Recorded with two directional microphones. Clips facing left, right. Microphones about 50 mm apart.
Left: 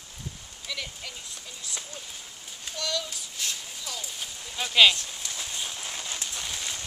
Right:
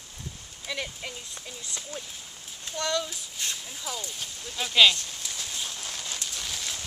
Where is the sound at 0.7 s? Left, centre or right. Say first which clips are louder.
Right 3 dB; right.